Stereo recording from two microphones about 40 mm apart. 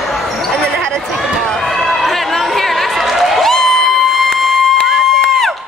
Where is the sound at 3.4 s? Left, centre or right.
Centre.